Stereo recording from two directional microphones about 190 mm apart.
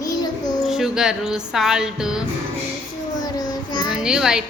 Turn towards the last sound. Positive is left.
turn(degrees=-5)  # may be behind; listen again after turning